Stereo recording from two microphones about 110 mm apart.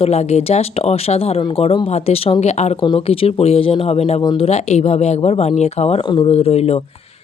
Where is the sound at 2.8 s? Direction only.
45° left (ahead or behind).